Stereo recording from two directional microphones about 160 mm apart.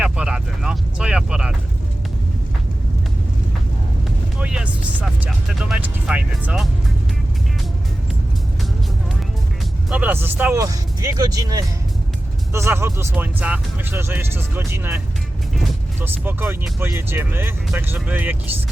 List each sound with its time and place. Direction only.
0.0 s vehicle: 5° right (ahead or behind)
4.4 s music: 5° right (ahead or behind)
9.9 s speech: 10° right (ahead or behind)